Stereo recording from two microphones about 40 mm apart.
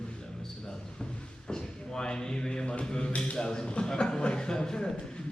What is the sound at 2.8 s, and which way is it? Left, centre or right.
A man's voice, centre.